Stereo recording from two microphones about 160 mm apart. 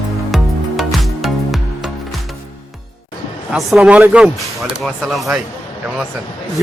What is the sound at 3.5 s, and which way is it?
Speech, 5° right (ahead or behind).